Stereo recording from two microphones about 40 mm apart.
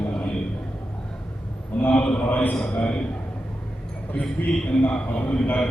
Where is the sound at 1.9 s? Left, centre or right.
Left.